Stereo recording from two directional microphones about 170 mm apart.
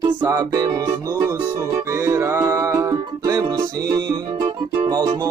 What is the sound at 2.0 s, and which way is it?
Music, 20° right (ahead or behind).